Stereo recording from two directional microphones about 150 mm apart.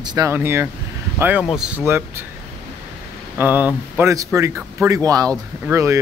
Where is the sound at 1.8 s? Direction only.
15° right (ahead or behind).